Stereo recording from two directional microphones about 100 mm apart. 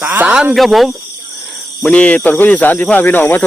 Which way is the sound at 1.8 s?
15° left (ahead or behind).